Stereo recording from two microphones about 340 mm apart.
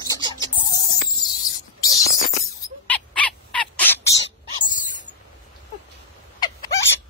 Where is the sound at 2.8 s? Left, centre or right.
Centre.